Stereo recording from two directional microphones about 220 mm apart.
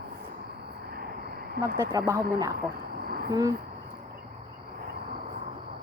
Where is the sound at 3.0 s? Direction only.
45° right (ahead or behind).